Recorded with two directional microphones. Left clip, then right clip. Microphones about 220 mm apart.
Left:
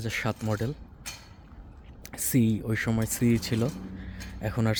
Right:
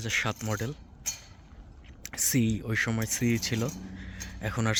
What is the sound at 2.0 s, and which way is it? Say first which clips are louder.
Speech: left 1 dB; 5° left (ahead or behind).